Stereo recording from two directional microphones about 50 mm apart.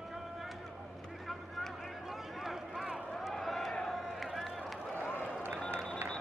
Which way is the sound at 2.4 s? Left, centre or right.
Centre.